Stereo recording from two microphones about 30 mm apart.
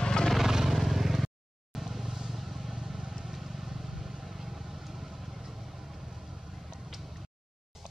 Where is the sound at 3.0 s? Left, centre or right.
Right.